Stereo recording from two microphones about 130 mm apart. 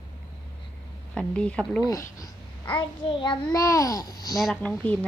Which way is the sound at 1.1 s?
10° left (ahead or behind).